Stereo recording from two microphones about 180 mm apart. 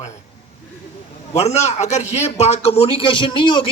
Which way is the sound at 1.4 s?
40° left (ahead or behind).